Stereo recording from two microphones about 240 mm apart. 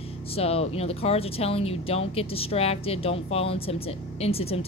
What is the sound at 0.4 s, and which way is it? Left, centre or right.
Speech, left.